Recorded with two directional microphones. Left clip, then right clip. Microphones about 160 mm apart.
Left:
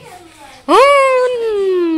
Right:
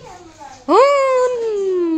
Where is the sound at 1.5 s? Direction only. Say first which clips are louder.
Left 4 dB; 5° left (ahead or behind).